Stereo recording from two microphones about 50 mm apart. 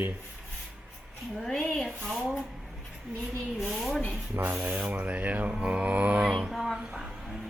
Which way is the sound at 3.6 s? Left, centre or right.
Centre.